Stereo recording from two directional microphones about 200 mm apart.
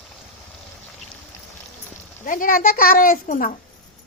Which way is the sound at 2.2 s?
45° left (ahead or behind).